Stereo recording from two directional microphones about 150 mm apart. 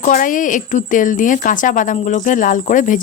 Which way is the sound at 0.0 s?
60° left (ahead or behind).